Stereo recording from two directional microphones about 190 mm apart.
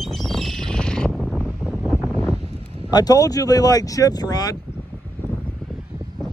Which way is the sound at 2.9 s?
20° left (ahead or behind).